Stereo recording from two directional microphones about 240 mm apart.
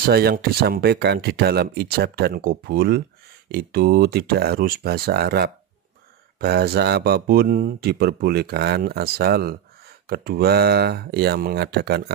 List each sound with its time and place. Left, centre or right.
0.0 s speech: right